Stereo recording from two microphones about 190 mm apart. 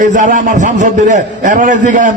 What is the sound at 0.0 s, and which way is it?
A man's voice, 40° right (ahead or behind).